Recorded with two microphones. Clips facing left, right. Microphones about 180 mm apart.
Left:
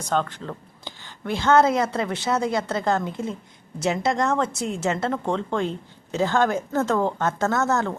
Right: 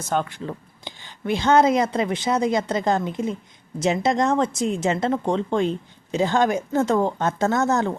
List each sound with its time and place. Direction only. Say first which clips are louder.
0.1 s a woman's voice: even; 10° right (ahead or behind)